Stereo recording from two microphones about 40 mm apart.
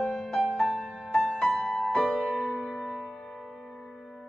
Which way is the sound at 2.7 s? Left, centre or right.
Centre.